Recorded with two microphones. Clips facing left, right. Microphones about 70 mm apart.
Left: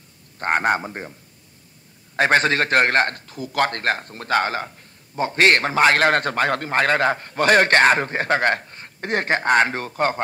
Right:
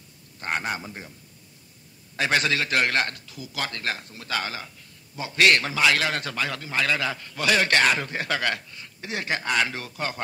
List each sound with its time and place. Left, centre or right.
0.4 s a man's voice: left
2.1 s a man's voice: left